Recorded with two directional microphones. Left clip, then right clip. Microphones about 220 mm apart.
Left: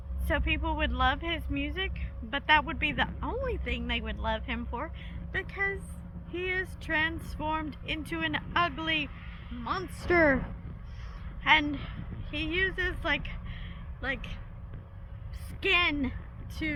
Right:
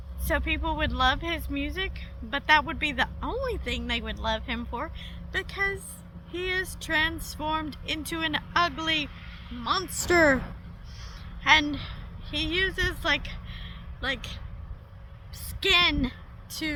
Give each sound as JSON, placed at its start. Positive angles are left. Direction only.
{"t": 0.3, "sound": "speech", "side_deg": -15}
{"t": 9.0, "sound": "a sound", "side_deg": -60}
{"t": 9.9, "sound": "speech", "side_deg": -20}
{"t": 11.4, "sound": "a woman's voice", "side_deg": -15}
{"t": 15.6, "sound": "speech", "side_deg": -15}